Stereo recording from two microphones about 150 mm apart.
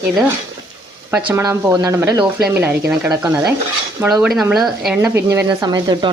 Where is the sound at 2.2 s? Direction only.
5° right (ahead or behind).